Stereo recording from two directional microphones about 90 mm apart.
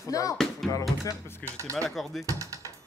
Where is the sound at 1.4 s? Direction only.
35° right (ahead or behind).